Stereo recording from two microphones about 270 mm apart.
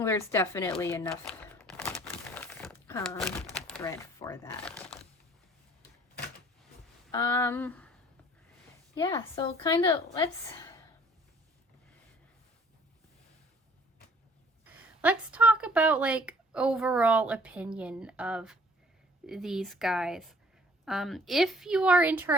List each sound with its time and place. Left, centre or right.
0.0 s a woman's voice: centre
1.4 s a sound: centre
2.0 s crumpling: centre
3.7 s speech: centre
7.1 s a woman's voice: centre
9.0 s a woman's voice: centre
15.0 s a woman's voice: centre